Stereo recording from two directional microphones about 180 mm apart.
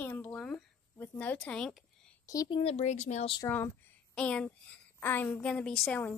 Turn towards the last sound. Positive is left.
turn(degrees=10)  # may be behind; listen again after turning